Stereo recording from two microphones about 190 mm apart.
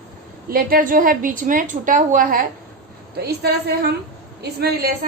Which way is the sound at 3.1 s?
60° right (ahead or behind).